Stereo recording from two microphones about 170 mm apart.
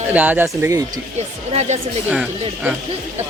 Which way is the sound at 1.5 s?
40° right (ahead or behind).